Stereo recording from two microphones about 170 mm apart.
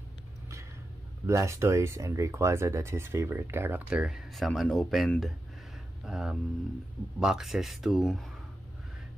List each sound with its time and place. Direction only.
1.2 s speech: 15° right (ahead or behind); by 8.3 s centre (ahead or behind)